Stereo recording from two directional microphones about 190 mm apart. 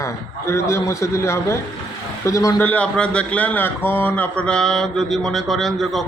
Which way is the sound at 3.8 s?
10° left (ahead or behind).